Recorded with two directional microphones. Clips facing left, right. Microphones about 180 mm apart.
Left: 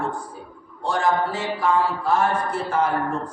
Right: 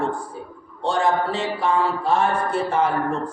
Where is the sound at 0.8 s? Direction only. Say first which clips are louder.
Right 1 dB; 25° right (ahead or behind).